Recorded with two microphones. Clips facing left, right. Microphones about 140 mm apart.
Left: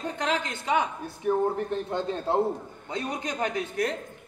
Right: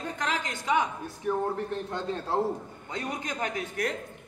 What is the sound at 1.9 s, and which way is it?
Speech, 20° left (ahead or behind).